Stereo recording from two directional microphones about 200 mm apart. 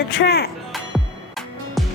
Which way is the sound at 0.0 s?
50° left (ahead or behind).